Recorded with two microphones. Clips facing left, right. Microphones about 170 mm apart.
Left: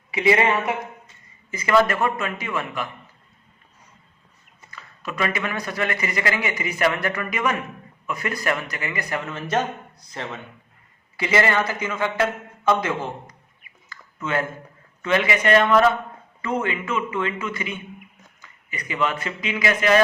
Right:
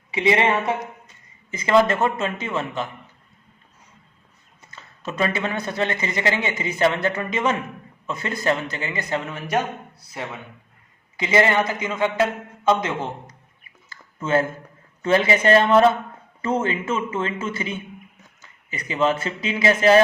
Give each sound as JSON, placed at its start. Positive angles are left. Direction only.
{"t": 0.1, "sound": "a man's voice", "side_deg": -20}
{"t": 4.7, "sound": "a man's voice", "side_deg": -25}
{"t": 11.2, "sound": "a man's voice", "side_deg": -20}
{"t": 13.9, "sound": "a sound", "side_deg": -30}
{"t": 15.0, "sound": "a man's voice", "side_deg": -30}